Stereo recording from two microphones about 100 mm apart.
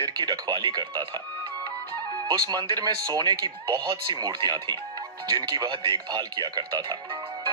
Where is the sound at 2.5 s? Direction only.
45° right (ahead or behind).